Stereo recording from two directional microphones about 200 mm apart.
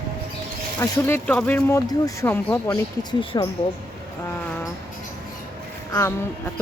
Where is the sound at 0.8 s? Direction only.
10° left (ahead or behind).